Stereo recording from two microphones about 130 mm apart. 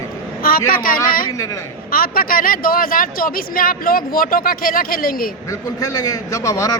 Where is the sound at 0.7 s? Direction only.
90° left.